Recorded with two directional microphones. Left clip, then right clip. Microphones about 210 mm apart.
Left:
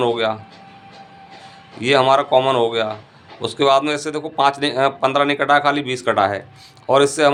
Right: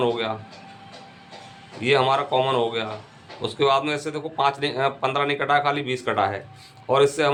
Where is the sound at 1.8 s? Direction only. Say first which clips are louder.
Left 5 dB; 35° left (ahead or behind).